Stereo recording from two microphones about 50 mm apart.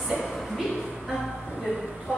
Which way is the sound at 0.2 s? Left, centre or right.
Centre.